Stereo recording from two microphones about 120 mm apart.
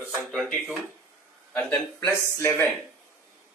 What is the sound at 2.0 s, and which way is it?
Speech, 25° left (ahead or behind).